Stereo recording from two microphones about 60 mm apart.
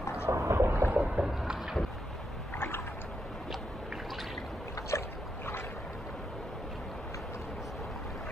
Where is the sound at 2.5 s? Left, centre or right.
Left.